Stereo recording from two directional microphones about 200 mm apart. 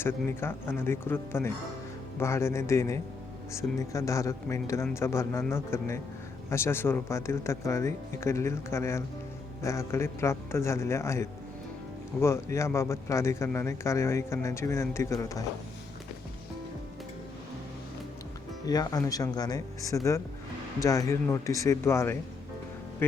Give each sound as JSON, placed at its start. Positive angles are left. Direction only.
{"t": 0.0, "sound": "a man's voice", "side_deg": 10}
{"t": 18.6, "sound": "a man's voice", "side_deg": 20}